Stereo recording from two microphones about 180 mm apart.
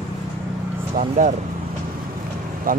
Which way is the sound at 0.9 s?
45° right (ahead or behind).